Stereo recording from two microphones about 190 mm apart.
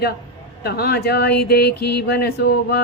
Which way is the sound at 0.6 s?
55° left (ahead or behind).